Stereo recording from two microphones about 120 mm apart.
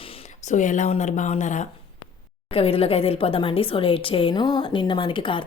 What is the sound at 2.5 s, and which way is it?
Speech, 55° left (ahead or behind).